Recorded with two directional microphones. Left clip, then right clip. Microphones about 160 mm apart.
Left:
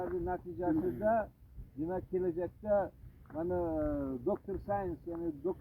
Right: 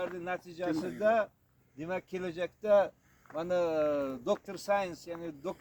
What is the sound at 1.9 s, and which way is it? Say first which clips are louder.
Speech: left 1 dB; 60° right (ahead or behind).